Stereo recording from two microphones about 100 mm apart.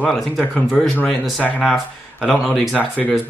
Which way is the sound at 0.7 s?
10° left (ahead or behind).